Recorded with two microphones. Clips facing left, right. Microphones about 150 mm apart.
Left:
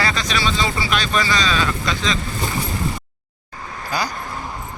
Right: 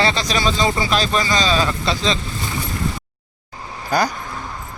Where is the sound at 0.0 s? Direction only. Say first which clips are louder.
Right 3 dB; 30° right (ahead or behind).